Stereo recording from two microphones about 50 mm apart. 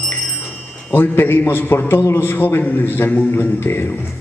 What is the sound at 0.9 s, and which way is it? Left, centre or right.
A man's voice, left.